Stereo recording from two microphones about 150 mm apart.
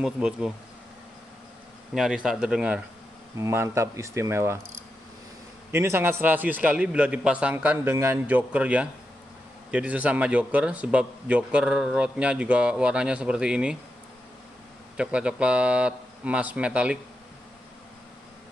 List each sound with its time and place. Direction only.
0.0 s speech: 5° right (ahead or behind)
2.0 s speech: 5° right (ahead or behind)
3.3 s speech: 20° right (ahead or behind)
5.7 s speech: 15° right (ahead or behind)
15.0 s speech: 5° right (ahead or behind)